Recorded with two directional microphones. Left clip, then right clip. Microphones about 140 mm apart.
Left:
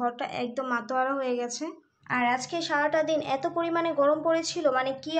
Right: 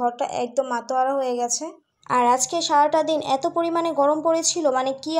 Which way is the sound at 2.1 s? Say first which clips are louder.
Right 8 dB; 35° right (ahead or behind).